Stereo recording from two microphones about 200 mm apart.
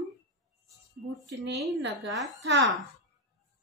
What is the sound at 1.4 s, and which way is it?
Speech, 60° right (ahead or behind).